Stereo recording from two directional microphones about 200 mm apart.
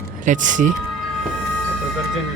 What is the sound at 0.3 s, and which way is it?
Speech, 40° right (ahead or behind).